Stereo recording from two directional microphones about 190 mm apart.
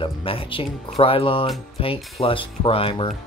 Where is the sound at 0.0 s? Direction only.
30° left (ahead or behind).